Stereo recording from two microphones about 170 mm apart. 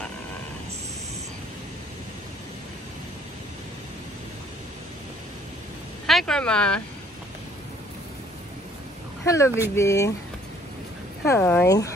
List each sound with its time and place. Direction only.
6.0 s speech: 5° left (ahead or behind)
9.2 s speech: 15° left (ahead or behind)
11.2 s speech: 15° left (ahead or behind)